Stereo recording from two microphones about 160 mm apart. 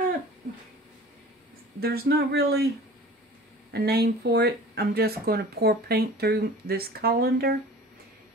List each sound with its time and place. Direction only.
1.8 s speech: 75° right (ahead or behind)
3.7 s speech: 90° right